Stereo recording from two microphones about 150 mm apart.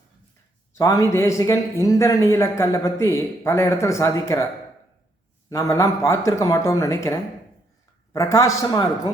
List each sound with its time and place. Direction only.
0.8 s a man's voice: 20° left (ahead or behind)
5.5 s a man's voice: 20° left (ahead or behind)